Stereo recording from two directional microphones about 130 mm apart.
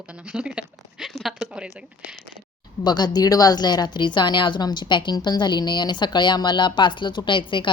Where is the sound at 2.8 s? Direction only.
35° left (ahead or behind).